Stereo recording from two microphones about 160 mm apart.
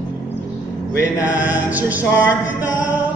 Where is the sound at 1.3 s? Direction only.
10° right (ahead or behind).